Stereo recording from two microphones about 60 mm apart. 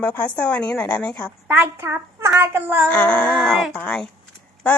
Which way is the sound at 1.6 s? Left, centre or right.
Right.